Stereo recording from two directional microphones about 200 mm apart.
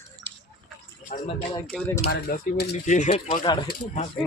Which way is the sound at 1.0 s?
40° left (ahead or behind).